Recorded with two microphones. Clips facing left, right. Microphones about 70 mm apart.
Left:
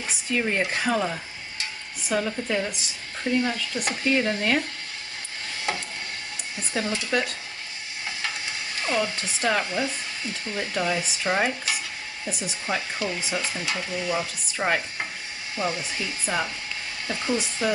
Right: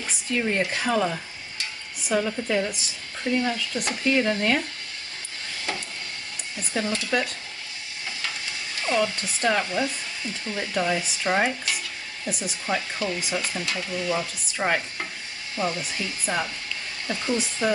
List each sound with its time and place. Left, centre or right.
0.3 s speech: centre
0.6 s speech: left
0.8 s speech: centre
6.7 s speech: centre
8.8 s speech: centre
12.6 s speech: centre
13.2 s speech: centre
13.6 s speech: centre